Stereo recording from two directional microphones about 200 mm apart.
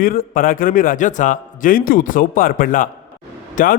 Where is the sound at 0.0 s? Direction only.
45° left (ahead or behind).